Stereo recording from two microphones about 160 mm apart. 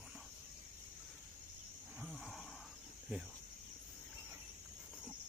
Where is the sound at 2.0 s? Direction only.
Centre (ahead or behind).